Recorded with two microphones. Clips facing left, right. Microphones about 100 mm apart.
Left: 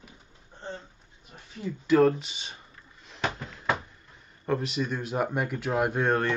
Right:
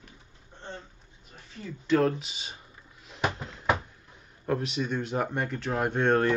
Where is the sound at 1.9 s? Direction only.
5° left (ahead or behind).